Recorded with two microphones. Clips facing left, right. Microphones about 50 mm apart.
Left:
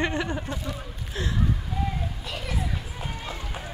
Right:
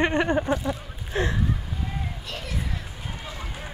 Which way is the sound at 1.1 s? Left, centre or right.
Right.